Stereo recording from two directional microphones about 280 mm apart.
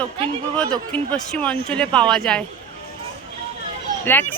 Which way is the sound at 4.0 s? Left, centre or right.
Centre.